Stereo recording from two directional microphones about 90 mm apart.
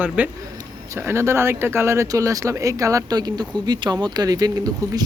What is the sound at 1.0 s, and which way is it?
Speech, 30° right (ahead or behind).